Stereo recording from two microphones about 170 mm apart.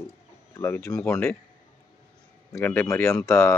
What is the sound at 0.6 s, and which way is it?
Speech, 15° left (ahead or behind).